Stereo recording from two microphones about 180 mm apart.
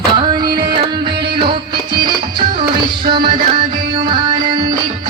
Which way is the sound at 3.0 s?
55° right (ahead or behind).